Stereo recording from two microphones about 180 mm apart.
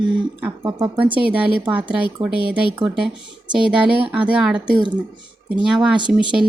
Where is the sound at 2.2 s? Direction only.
5° right (ahead or behind).